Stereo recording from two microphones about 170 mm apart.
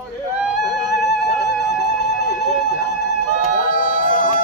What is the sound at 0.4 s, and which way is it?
Music, centre (ahead or behind).